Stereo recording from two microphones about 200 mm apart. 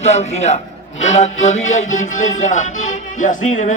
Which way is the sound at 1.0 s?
35° left (ahead or behind).